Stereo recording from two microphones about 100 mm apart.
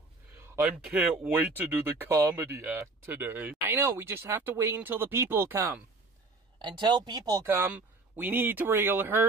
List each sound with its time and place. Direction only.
0.7 s speech: 10° right (ahead or behind); by 5.8 s 25° right (ahead or behind)
6.6 s a woman's voice: 45° right (ahead or behind)
7.4 s speech: 20° right (ahead or behind)